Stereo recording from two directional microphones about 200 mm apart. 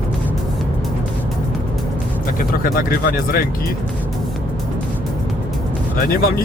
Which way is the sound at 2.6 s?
45° left (ahead or behind).